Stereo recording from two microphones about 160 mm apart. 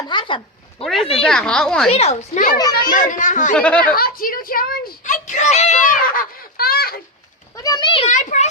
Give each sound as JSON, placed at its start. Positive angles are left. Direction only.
{"t": 0.1, "sound": "a sound", "side_deg": 30}
{"t": 1.2, "sound": "a woman's voice", "side_deg": 5}
{"t": 1.9, "sound": "a child's voice", "side_deg": 40}
{"t": 3.5, "sound": "speech", "side_deg": 10}
{"t": 3.8, "sound": "speech", "side_deg": 65}
{"t": 7.5, "sound": "a child's voice", "side_deg": 25}
{"t": 8.0, "sound": "a child's voice", "side_deg": 50}